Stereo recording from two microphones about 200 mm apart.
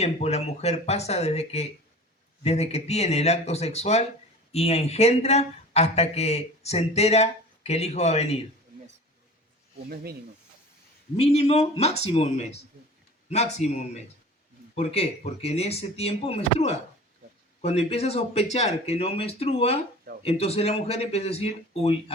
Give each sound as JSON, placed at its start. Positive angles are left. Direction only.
{"t": 0.0, "sound": "speech", "side_deg": 30}
{"t": 9.9, "sound": "speech", "side_deg": -50}
{"t": 11.2, "sound": "speech", "side_deg": 30}